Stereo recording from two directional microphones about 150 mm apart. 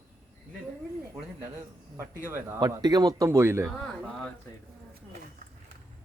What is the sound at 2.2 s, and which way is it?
Speech, 15° right (ahead or behind).